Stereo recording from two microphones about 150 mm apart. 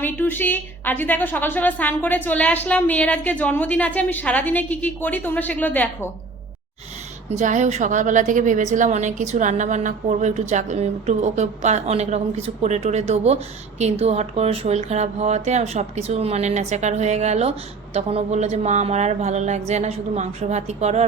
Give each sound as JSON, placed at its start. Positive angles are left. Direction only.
{"t": 0.0, "sound": "a woman's voice", "side_deg": 15}
{"t": 7.3, "sound": "a woman's voice", "side_deg": -55}